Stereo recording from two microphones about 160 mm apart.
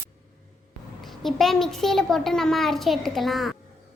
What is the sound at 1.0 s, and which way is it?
A child's voice, centre (ahead or behind).